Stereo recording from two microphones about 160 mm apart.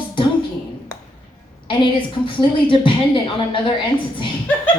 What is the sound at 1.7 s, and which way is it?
A woman's voice, 30° left (ahead or behind).